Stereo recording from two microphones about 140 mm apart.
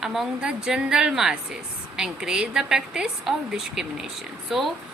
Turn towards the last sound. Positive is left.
turn(degrees=0)  # may be behind; listen again after turning